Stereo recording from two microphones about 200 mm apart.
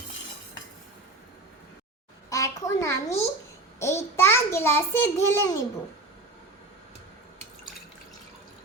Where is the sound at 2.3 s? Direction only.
15° left (ahead or behind).